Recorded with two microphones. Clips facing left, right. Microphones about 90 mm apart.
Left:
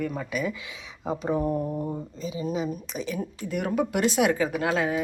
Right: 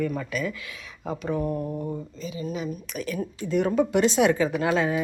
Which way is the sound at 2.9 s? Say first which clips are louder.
Right 4 dB; 20° left (ahead or behind).